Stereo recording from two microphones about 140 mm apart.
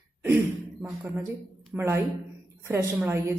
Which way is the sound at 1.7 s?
15° right (ahead or behind).